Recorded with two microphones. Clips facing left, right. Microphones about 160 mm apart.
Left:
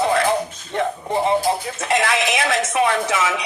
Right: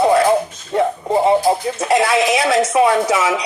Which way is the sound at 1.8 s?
30° right (ahead or behind).